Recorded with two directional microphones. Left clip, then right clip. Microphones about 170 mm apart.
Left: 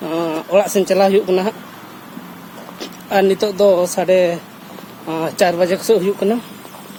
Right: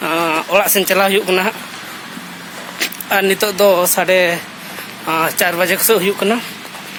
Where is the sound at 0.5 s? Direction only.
20° left (ahead or behind).